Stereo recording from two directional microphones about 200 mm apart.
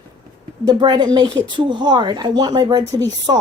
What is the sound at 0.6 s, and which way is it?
A woman's voice, 20° right (ahead or behind).